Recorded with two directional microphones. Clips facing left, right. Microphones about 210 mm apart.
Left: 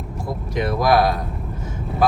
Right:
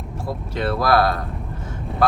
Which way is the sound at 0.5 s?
15° left (ahead or behind).